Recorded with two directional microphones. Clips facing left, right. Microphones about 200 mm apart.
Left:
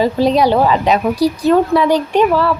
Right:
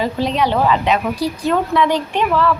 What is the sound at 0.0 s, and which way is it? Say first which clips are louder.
A woman's voice: left 6 dB; 35° left (ahead or behind).